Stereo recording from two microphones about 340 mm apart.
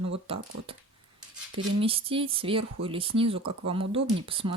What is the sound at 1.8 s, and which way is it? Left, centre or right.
Speech, centre.